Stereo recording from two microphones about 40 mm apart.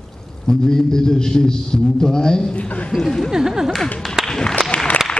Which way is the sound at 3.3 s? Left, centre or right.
Centre.